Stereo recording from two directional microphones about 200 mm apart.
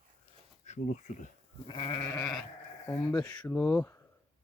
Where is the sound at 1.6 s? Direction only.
25° left (ahead or behind).